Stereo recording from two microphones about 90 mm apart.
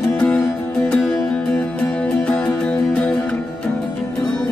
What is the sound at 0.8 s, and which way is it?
Music, 10° left (ahead or behind).